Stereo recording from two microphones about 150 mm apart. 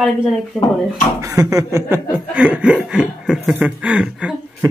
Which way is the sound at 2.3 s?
5° right (ahead or behind).